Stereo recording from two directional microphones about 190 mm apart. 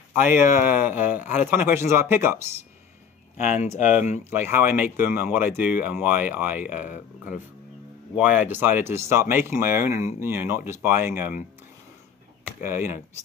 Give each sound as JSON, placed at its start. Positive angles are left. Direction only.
{"t": 0.2, "sound": "speech", "side_deg": -10}
{"t": 3.3, "sound": "speech", "side_deg": 40}
{"t": 4.2, "sound": "speech", "side_deg": -10}
{"t": 8.2, "sound": "speech", "side_deg": -10}
{"t": 12.6, "sound": "speech", "side_deg": -10}